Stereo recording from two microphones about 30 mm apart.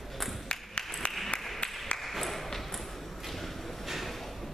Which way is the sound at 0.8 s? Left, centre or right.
Left.